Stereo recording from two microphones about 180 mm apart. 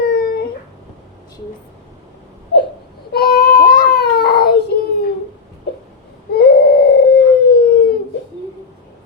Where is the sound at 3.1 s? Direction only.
60° left (ahead or behind).